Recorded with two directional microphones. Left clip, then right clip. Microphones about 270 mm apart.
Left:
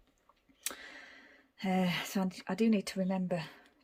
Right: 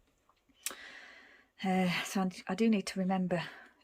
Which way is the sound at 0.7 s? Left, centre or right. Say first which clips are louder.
Even; centre.